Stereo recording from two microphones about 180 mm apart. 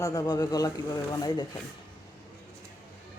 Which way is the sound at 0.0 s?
20° left (ahead or behind).